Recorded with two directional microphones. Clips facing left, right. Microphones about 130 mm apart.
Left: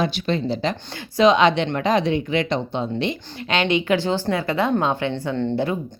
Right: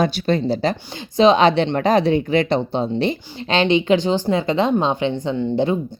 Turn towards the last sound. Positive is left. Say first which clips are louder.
# right 3 dB
turn(degrees=-20)  # may be behind; listen again after turning